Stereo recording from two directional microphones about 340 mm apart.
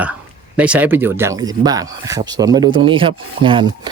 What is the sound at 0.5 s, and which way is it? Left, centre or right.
Speech, centre.